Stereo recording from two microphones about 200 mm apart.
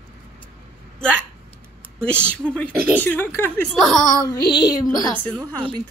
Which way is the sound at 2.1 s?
5° left (ahead or behind).